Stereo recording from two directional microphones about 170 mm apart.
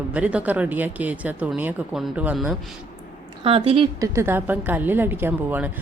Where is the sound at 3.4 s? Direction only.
35° right (ahead or behind).